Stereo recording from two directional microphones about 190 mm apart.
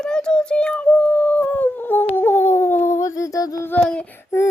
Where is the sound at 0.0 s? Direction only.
5° left (ahead or behind).